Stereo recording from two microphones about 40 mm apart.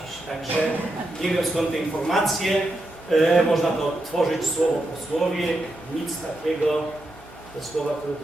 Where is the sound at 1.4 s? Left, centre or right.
Centre.